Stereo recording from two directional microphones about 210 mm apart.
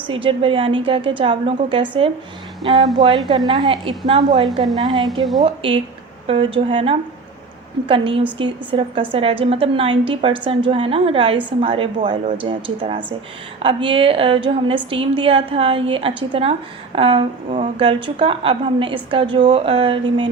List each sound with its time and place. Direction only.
0.1 s a woman's voice: 25° right (ahead or behind)